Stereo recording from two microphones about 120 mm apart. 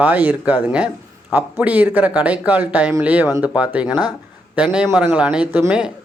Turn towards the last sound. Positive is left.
turn(degrees=-5)  # may be behind; listen again after turning